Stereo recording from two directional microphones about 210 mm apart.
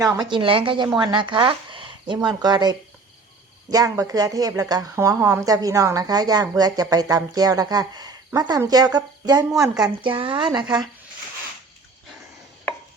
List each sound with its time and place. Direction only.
0.0 s a woman's voice: 20° right (ahead or behind)